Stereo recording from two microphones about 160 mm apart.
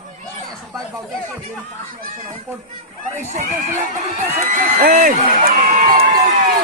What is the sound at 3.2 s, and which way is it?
Speech, 50° right (ahead or behind).